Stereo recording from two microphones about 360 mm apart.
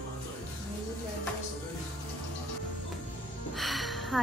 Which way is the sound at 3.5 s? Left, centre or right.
Centre.